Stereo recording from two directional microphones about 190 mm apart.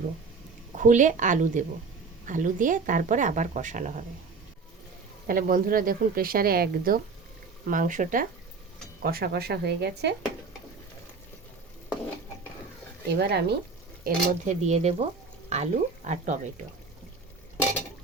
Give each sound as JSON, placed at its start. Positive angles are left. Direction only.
{"t": 0.8, "sound": "a woman's voice", "side_deg": -40}
{"t": 5.3, "sound": "a woman's voice", "side_deg": -45}
{"t": 13.1, "sound": "a woman's voice", "side_deg": -60}
{"t": 14.6, "sound": "speech", "side_deg": -35}